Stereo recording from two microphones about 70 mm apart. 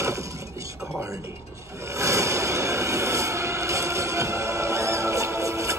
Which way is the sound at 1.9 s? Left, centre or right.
Right.